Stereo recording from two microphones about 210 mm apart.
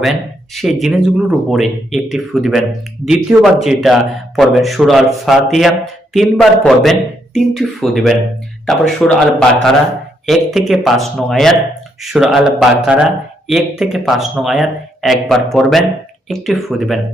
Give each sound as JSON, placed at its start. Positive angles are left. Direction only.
{"t": 0.0, "sound": "speech", "side_deg": 0}